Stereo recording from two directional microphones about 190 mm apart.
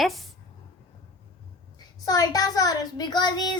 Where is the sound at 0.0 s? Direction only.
Centre (ahead or behind).